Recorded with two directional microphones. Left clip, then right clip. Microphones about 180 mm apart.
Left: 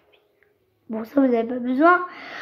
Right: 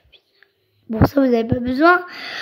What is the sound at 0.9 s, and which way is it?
A woman's voice, 35° right (ahead or behind).